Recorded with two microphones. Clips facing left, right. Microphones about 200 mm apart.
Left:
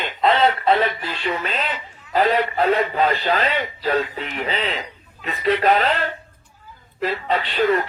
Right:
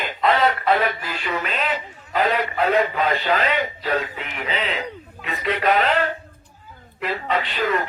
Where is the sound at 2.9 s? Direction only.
35° left (ahead or behind).